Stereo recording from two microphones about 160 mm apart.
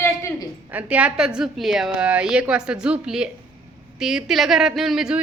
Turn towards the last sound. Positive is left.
turn(degrees=-5)  # may be behind; listen again after turning